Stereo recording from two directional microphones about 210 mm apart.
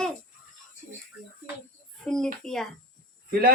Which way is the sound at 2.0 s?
5° left (ahead or behind).